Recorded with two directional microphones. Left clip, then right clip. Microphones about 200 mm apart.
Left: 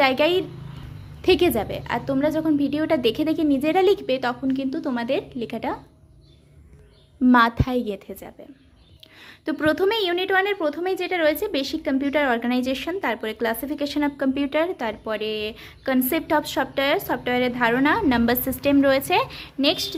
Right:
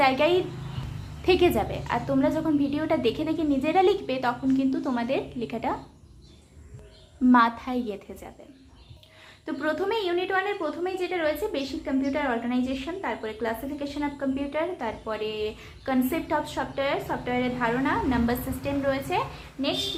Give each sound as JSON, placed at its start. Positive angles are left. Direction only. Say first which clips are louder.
{"t": 0.0, "sound": "a woman's voice", "louder": "left 2 dB", "side_deg": 45}
{"t": 7.3, "sound": "a woman's voice", "louder": "left 3 dB", "side_deg": 40}
{"t": 9.5, "sound": "a woman's voice", "louder": "left 6 dB", "side_deg": 50}